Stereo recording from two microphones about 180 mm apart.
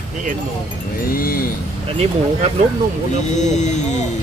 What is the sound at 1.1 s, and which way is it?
Speech, 55° left (ahead or behind).